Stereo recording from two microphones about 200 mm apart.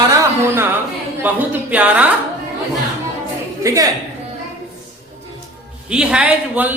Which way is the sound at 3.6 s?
15° right (ahead or behind).